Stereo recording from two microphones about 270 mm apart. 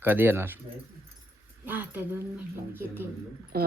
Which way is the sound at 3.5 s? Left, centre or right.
Right.